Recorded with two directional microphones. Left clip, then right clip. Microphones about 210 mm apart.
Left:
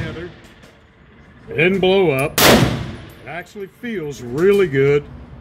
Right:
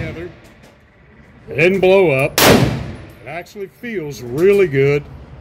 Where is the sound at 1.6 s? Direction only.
20° right (ahead or behind).